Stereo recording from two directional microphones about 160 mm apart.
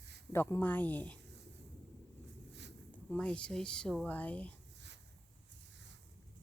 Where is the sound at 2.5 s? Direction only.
90° right.